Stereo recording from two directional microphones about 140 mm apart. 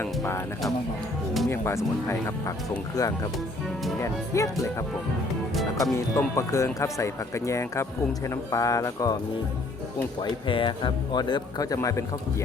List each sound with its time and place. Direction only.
0.0 s speech: 20° left (ahead or behind)
1.5 s speech: 20° left (ahead or behind)
5.8 s speech: 20° left (ahead or behind)
10.2 s speech: 35° left (ahead or behind)